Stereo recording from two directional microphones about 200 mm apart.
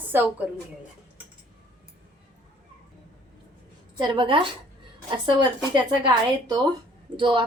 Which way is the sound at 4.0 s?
25° right (ahead or behind).